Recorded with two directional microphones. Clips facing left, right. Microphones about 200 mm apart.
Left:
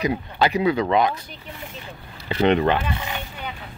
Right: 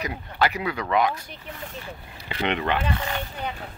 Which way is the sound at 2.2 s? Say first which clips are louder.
Left 8 dB; 35° left (ahead or behind).